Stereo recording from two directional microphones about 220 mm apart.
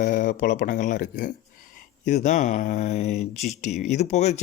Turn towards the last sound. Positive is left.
turn(degrees=30)  # may be behind; listen again after turning